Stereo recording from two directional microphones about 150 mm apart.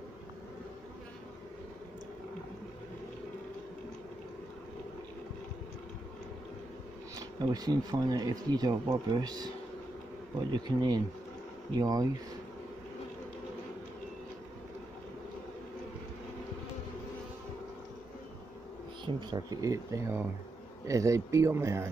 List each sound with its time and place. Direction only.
7.2 s speech: 25° right (ahead or behind)
10.5 s speech: 30° right (ahead or behind)
19.1 s speech: 25° right (ahead or behind)